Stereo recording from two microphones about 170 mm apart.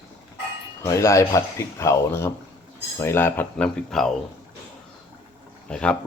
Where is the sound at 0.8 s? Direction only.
15° left (ahead or behind).